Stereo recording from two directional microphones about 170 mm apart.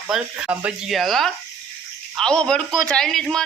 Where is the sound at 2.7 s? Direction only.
25° right (ahead or behind).